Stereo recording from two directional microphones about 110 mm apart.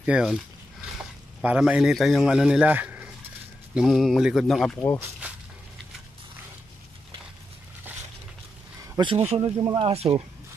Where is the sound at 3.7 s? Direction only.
5° right (ahead or behind).